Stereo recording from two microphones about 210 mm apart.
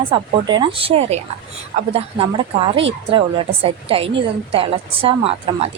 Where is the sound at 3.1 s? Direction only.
25° right (ahead or behind).